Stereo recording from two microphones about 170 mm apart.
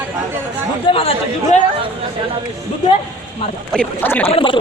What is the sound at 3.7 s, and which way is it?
Speech, 5° left (ahead or behind).